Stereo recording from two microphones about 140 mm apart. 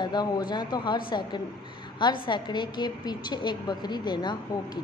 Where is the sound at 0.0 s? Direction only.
30° left (ahead or behind).